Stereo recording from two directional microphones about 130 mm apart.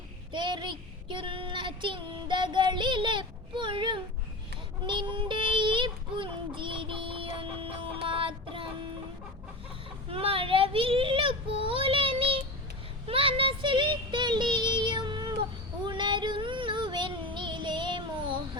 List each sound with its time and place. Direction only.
0.3 s child singing: 35° right (ahead or behind)
10.1 s child singing: 45° right (ahead or behind)